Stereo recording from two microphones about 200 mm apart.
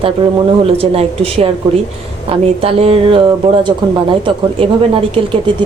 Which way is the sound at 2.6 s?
30° right (ahead or behind).